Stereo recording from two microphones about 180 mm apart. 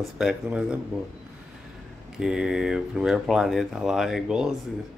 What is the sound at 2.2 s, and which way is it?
Speech, 5° right (ahead or behind).